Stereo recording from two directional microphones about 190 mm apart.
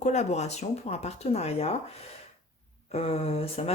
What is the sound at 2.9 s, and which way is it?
Speech, 35° left (ahead or behind).